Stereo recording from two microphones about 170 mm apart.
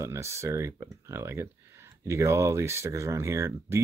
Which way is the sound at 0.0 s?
15° right (ahead or behind).